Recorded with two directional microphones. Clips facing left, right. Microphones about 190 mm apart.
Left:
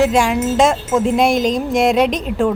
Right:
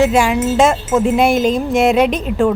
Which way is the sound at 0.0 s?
Centre (ahead or behind).